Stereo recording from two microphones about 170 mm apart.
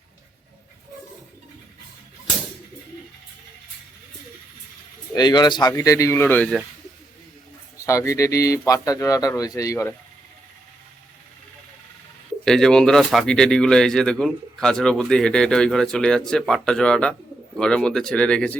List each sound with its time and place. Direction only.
5.1 s speech: 25° left (ahead or behind)
7.8 s speech: 20° left (ahead or behind)
12.5 s speech: 5° left (ahead or behind)